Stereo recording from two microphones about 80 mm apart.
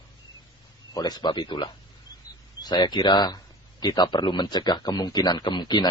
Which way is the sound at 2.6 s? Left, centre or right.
Left.